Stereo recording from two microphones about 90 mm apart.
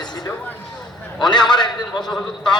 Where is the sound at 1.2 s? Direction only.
55° left (ahead or behind).